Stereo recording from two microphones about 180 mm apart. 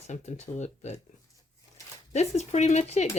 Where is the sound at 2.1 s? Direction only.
40° left (ahead or behind).